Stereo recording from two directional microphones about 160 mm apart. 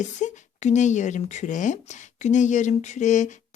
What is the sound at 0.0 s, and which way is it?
Speech, 50° left (ahead or behind).